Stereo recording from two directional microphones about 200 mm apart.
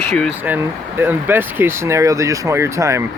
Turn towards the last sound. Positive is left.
turn(degrees=-15)  # may be behind; listen again after turning